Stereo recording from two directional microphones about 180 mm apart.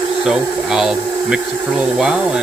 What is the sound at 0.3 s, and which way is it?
Speech, 5° right (ahead or behind).